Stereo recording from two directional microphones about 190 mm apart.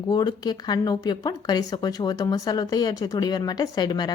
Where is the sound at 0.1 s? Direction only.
20° left (ahead or behind).